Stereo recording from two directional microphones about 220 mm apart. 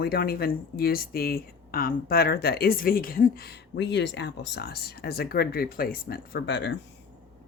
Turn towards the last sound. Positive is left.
turn(degrees=55)  # may be behind; listen again after turning